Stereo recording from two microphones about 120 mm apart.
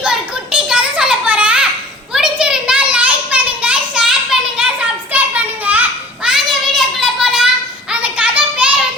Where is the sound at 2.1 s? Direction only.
5° right (ahead or behind).